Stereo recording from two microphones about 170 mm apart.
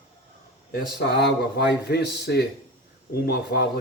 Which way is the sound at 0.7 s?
70° left (ahead or behind).